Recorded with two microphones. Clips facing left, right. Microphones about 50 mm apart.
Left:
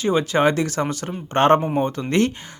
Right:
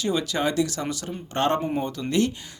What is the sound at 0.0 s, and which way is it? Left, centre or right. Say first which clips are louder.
A man's voice: left 7 dB; left.